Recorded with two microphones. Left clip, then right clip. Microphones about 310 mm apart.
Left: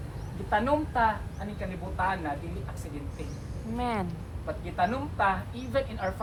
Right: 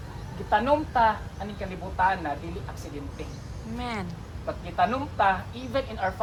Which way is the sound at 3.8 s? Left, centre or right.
Centre.